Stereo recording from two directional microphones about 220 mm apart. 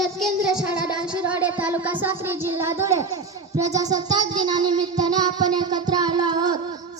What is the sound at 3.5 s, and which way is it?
Music, 15° right (ahead or behind).